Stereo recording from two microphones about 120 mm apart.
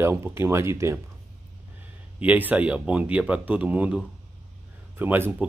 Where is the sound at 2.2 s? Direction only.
15° right (ahead or behind).